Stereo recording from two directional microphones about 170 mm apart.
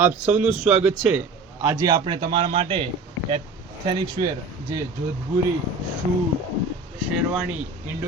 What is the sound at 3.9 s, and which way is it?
Speech, 25° right (ahead or behind).